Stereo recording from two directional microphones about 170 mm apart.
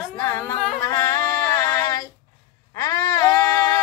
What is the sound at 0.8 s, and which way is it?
Female singing, 15° left (ahead or behind).